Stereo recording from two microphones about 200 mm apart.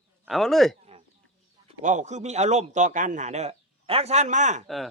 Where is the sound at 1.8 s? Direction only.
35° right (ahead or behind).